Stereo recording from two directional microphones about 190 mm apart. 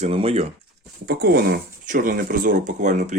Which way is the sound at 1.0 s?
55° right (ahead or behind).